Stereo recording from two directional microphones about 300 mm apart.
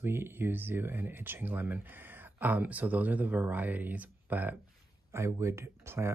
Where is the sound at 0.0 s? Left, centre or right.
Centre.